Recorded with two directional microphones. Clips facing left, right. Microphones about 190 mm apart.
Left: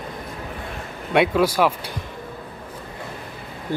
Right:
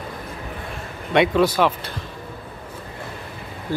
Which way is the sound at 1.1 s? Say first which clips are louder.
Right 1 dB; 5° left (ahead or behind).